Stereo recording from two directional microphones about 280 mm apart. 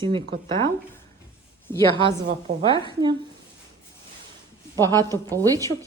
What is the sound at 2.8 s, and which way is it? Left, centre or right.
Speech, centre.